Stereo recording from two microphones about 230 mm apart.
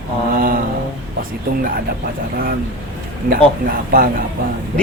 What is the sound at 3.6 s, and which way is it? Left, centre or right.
Speech, right.